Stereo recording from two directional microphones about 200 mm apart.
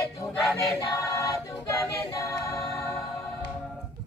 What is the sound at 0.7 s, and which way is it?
A capella, 15° left (ahead or behind).